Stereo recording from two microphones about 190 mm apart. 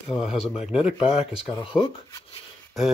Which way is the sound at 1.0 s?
30° left (ahead or behind).